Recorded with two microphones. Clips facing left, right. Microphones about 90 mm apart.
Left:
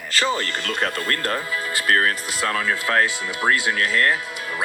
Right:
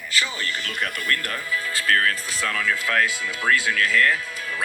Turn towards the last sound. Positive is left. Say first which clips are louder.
# left 2 dB
turn(degrees=25)  # may be behind; listen again after turning